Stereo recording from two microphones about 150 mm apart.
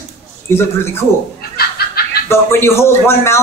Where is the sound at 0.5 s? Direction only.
15° left (ahead or behind).